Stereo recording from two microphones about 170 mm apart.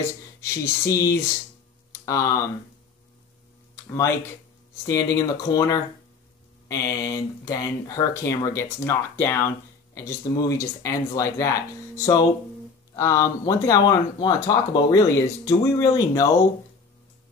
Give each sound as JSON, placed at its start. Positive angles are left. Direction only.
{"t": 0.4, "sound": "speech", "side_deg": 20}
{"t": 4.8, "sound": "speech", "side_deg": 20}